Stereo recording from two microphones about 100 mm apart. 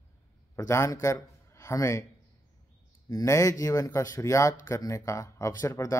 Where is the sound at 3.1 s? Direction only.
35° left (ahead or behind).